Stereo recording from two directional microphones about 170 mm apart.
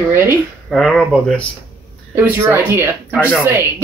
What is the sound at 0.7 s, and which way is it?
Speech, centre (ahead or behind).